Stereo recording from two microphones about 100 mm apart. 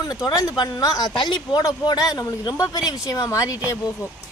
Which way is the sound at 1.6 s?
40° left (ahead or behind).